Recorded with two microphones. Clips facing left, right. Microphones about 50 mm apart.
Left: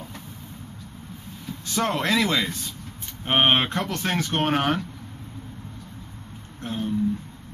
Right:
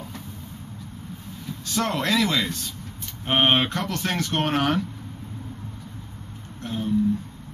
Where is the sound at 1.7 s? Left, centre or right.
Centre.